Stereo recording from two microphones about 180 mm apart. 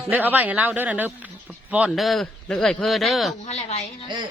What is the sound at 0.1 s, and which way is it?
A man's voice, 10° right (ahead or behind).